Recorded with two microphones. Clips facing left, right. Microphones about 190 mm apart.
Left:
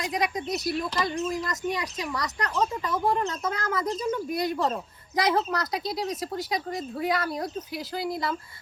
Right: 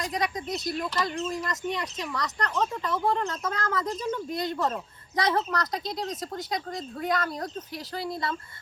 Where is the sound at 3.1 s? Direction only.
15° left (ahead or behind).